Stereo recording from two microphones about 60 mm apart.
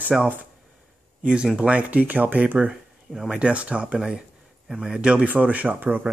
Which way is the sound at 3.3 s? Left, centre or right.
Centre.